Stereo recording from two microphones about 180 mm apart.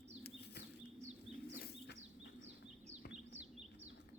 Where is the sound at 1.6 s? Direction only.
65° left (ahead or behind).